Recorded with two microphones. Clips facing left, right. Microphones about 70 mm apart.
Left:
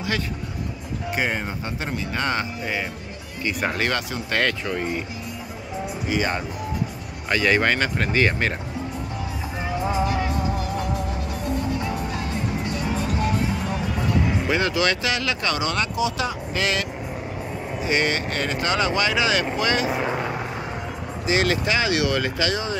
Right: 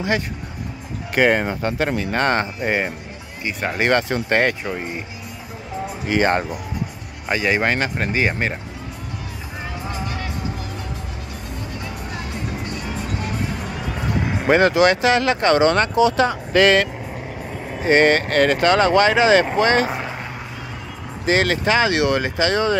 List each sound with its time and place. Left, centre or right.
1.1 s speech: right
4.3 s speech: right
6.0 s speech: right
7.2 s speech: centre
9.8 s music: centre
14.4 s speech: right
17.8 s speech: right
21.3 s speech: right